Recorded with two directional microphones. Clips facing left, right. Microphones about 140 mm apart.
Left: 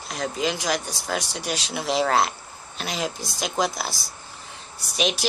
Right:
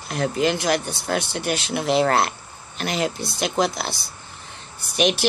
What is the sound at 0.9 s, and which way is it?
Speech, 60° right (ahead or behind).